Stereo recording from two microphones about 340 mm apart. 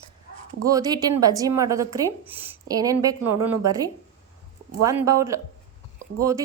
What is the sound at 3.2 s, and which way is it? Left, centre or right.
Speech, right.